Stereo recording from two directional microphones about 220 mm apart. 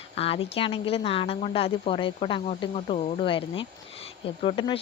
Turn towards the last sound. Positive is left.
turn(degrees=25)  # may be behind; listen again after turning